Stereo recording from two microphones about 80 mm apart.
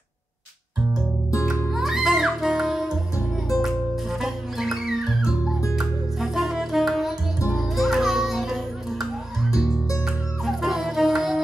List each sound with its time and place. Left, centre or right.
1.7 s music: centre
4.2 s music: centre